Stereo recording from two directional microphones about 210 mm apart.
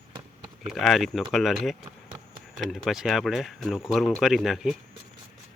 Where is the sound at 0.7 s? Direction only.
Centre (ahead or behind).